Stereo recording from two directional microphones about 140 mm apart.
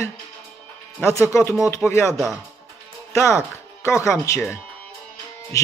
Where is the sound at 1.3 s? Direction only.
20° left (ahead or behind).